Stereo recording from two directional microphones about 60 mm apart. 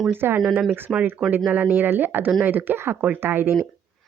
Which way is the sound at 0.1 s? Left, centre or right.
Right.